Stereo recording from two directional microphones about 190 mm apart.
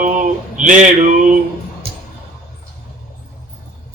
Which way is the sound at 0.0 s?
40° right (ahead or behind).